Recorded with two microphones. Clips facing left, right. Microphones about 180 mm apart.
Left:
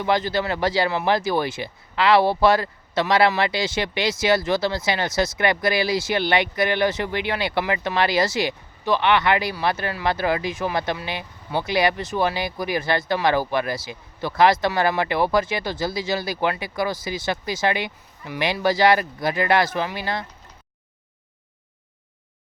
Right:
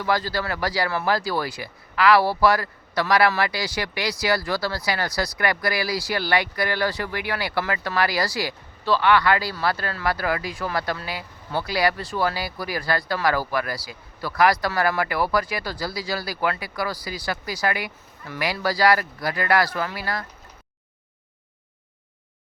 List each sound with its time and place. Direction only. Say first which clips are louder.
0.0 s speech: left 3 dB; 20° left (ahead or behind)